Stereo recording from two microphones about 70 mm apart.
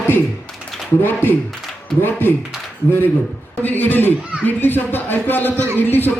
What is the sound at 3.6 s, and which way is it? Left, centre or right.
A man's voice, left.